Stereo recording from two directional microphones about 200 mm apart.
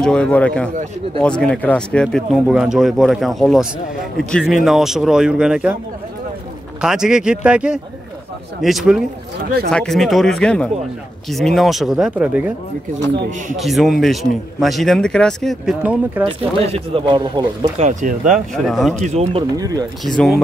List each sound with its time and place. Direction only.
0.0 s speech: 5° left (ahead or behind)
6.8 s speech: 5° right (ahead or behind)
13.1 s speech: 55° right (ahead or behind)
13.6 s speech: centre (ahead or behind)
16.3 s speech: 25° right (ahead or behind)
18.5 s speech: centre (ahead or behind)
18.9 s speech: 35° right (ahead or behind)
19.5 s speech: 20° right (ahead or behind)
20.1 s speech: centre (ahead or behind)